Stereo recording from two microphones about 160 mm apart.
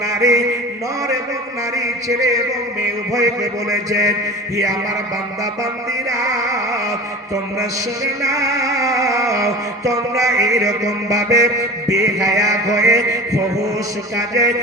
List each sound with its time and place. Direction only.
0.1 s music: 20° right (ahead or behind)
1.7 s music: 20° right (ahead or behind)
6.1 s music: 20° right (ahead or behind)